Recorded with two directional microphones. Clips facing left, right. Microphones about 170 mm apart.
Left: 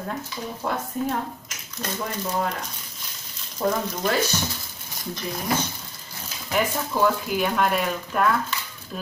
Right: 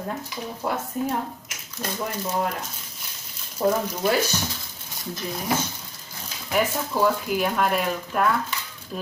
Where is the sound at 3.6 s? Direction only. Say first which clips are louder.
Right 2 dB; 10° right (ahead or behind).